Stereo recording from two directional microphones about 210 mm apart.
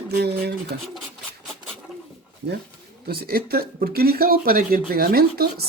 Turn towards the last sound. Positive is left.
turn(degrees=-45)  # may be behind; listen again after turning